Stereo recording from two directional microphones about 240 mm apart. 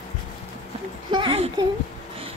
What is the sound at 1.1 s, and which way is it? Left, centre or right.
Speech, right.